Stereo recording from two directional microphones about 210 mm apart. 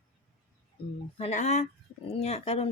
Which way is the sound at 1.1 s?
30° left (ahead or behind).